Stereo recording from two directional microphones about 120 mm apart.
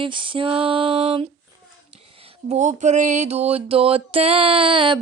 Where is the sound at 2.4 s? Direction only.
80° right.